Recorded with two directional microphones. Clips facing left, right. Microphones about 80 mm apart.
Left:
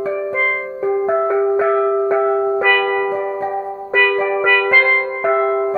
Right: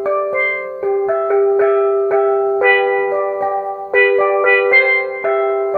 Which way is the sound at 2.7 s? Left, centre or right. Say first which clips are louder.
Right 3 dB; centre.